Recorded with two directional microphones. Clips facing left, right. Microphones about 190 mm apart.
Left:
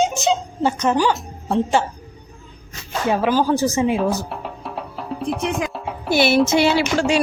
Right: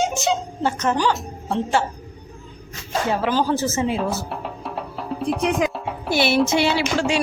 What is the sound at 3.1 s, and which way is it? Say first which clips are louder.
Speech: left 4 dB; 15° left (ahead or behind).